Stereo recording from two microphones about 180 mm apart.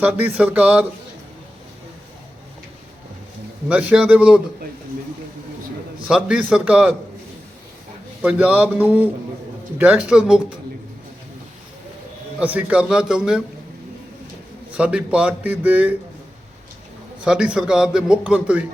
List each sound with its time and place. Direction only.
0.0 s a man's voice: 10° right (ahead or behind)
3.7 s a man's voice: 5° right (ahead or behind)
6.1 s a man's voice: 5° right (ahead or behind)
8.2 s a man's voice: 5° right (ahead or behind)
12.4 s a man's voice: 10° right (ahead or behind)
14.7 s a man's voice: 5° right (ahead or behind)
17.2 s a man's voice: 5° right (ahead or behind)